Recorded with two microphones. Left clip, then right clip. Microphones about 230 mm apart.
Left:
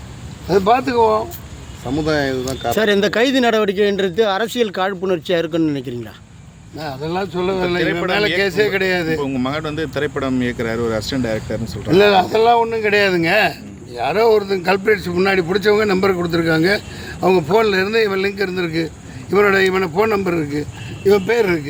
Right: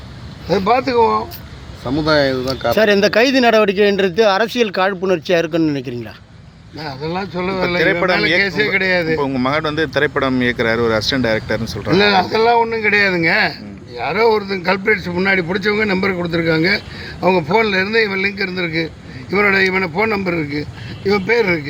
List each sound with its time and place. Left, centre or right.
0.4 s a man's voice: centre
2.0 s speech: right
2.7 s a man's voice: centre
7.8 s speech: right
8.4 s a man's voice: centre
9.2 s speech: centre
11.9 s a man's voice: centre